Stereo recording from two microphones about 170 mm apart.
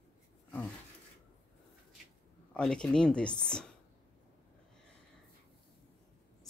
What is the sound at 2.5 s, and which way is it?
Speech, 5° left (ahead or behind).